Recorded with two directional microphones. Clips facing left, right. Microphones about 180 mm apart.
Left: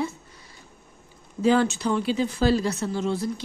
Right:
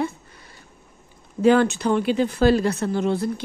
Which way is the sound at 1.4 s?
60° right (ahead or behind).